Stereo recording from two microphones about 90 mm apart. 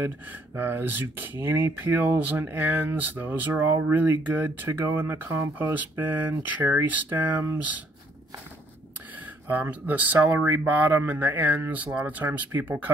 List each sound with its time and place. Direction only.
0.6 s speech: 25° right (ahead or behind)
6.6 s speech: 30° right (ahead or behind)
9.5 s speech: 20° right (ahead or behind)